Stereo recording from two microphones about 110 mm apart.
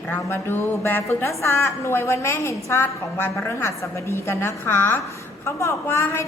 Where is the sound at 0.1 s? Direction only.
20° left (ahead or behind).